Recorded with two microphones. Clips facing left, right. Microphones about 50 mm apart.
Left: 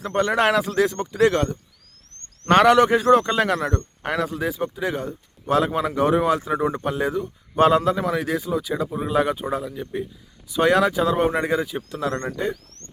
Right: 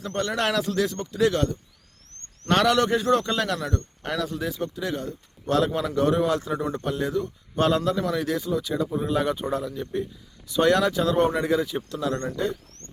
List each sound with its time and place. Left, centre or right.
0.0 s a man's voice: centre
4.0 s a man's voice: left